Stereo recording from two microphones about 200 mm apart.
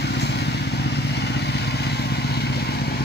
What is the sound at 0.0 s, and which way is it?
Vehicle, 55° left (ahead or behind).